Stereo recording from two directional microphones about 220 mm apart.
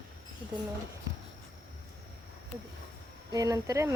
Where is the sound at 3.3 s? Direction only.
15° right (ahead or behind).